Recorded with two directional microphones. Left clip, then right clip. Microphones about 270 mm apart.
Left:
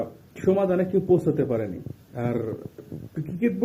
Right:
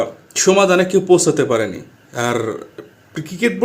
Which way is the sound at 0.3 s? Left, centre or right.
Centre.